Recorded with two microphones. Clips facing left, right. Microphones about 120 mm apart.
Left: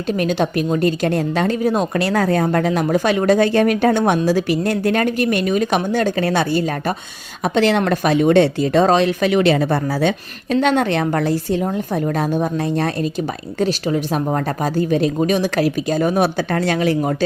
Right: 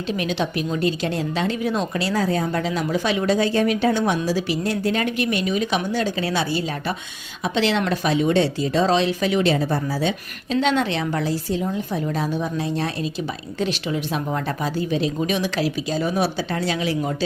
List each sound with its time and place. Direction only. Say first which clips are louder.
0.1 s a woman's voice: left 6 dB; 45° left (ahead or behind)
5.0 s a woman's voice: left 5 dB; 45° left (ahead or behind)